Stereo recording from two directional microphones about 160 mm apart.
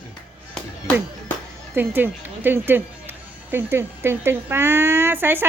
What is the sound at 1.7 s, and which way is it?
A man's voice, 10° right (ahead or behind).